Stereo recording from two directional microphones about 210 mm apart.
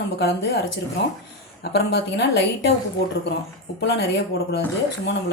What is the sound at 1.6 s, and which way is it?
A woman's voice, 50° left (ahead or behind).